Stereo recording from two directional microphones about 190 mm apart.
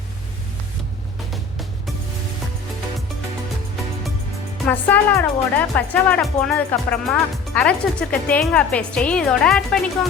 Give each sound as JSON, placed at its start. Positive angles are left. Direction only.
{"t": 4.6, "sound": "speech", "side_deg": 10}